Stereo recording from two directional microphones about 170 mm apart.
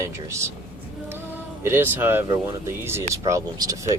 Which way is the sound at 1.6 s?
15° right (ahead or behind).